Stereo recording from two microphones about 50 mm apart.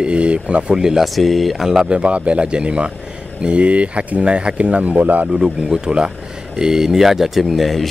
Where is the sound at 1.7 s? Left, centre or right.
Centre; by 5.3 s right.